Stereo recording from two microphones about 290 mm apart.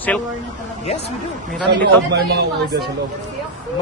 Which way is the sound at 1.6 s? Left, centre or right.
Right.